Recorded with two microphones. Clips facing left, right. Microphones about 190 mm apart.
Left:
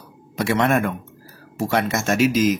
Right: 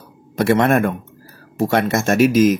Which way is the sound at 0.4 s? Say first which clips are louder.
Right 4 dB; 55° right (ahead or behind).